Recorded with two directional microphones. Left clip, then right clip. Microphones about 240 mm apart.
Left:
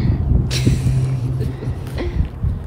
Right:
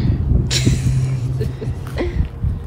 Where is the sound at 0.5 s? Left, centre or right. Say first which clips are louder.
Right 3 dB; right.